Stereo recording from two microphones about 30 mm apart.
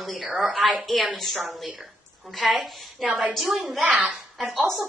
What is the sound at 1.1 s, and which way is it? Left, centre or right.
Speech, centre.